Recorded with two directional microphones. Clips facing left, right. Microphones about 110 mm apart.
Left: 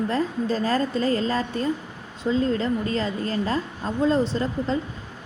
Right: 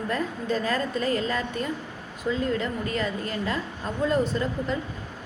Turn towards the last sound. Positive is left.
turn(degrees=30)  # may be behind; listen again after turning